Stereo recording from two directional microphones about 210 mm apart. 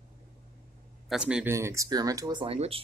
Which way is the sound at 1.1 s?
5° right (ahead or behind).